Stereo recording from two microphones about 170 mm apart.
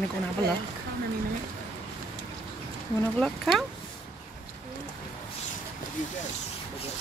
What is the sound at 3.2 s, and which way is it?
Speech, centre (ahead or behind).